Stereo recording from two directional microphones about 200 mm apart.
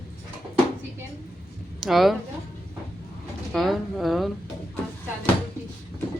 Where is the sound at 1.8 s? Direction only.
Centre (ahead or behind).